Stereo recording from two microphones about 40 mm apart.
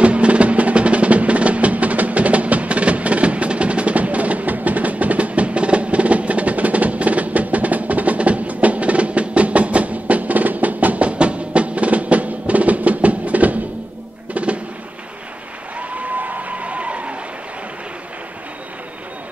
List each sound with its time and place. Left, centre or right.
0.0 s music: right
15.9 s applause: right